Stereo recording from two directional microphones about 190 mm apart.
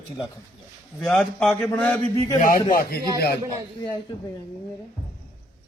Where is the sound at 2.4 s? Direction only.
45° left (ahead or behind).